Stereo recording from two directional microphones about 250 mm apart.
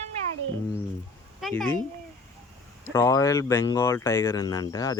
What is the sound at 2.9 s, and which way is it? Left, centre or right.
Speech, centre.